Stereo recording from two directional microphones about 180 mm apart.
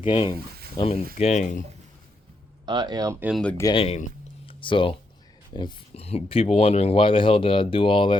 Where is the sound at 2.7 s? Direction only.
25° right (ahead or behind).